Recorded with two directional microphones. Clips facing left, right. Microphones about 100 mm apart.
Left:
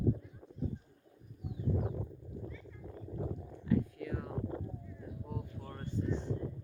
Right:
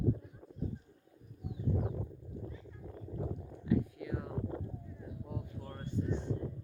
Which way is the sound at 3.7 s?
15° right (ahead or behind).